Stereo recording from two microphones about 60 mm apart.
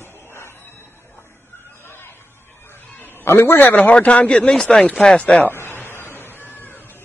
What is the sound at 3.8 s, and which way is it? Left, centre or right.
Speech, left.